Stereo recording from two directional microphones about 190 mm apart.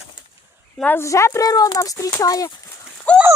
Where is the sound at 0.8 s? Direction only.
10° left (ahead or behind).